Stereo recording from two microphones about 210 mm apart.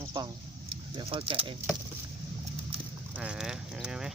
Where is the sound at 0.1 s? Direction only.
20° right (ahead or behind).